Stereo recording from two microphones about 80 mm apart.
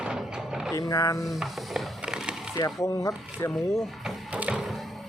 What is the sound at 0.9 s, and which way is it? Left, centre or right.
Speech, left.